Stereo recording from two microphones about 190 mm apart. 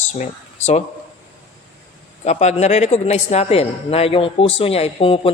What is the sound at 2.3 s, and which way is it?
A man's voice, 35° left (ahead or behind).